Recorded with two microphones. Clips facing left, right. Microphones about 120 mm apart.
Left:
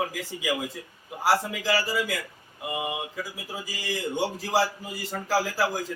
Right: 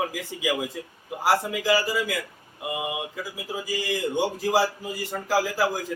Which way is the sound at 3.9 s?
15° right (ahead or behind).